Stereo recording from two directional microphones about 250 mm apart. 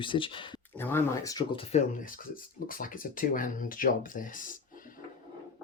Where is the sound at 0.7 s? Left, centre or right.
Centre; by 4.9 s left.